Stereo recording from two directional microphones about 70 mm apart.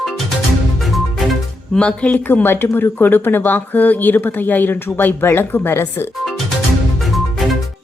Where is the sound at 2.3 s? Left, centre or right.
Left.